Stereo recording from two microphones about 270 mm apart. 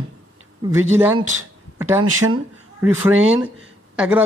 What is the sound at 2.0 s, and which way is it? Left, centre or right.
Speech, right.